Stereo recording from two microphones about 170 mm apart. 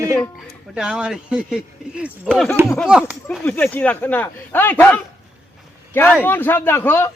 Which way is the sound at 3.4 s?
10° left (ahead or behind).